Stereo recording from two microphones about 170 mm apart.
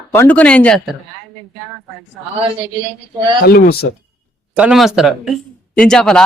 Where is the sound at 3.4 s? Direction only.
70° left (ahead or behind).